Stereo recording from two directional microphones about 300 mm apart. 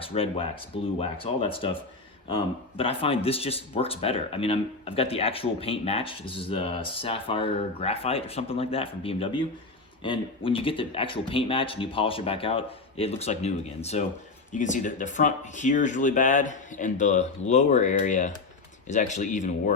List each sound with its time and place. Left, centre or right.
0.0 s speech: centre